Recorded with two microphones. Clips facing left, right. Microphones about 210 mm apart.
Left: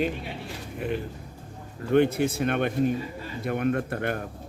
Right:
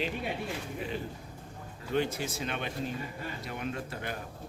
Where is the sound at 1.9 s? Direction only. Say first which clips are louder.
Left 10 dB; 60° left (ahead or behind).